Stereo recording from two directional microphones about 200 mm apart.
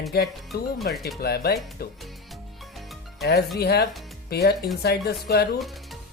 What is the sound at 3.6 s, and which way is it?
Speech, 55° left (ahead or behind).